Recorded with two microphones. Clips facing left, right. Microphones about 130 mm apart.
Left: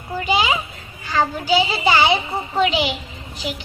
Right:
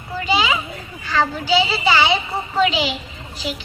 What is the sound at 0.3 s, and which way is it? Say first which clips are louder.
Children playing: even; 50° left (ahead or behind).